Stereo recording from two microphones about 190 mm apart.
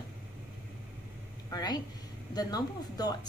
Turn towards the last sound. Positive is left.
turn(degrees=20)  # may be behind; listen again after turning